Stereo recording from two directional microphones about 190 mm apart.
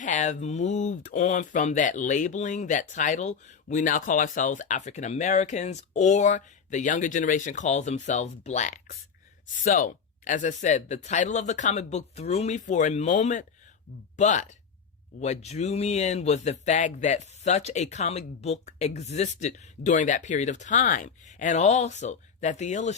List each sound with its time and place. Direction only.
0.0 s speech: 40° left (ahead or behind)